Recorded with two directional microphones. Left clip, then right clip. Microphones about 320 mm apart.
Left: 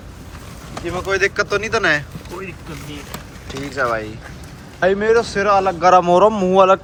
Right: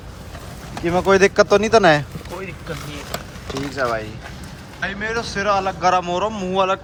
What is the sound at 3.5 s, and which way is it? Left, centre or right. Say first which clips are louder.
Speech: left 2 dB; centre.